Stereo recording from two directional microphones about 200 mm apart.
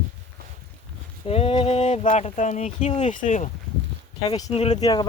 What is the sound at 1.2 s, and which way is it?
Speech, 30° left (ahead or behind).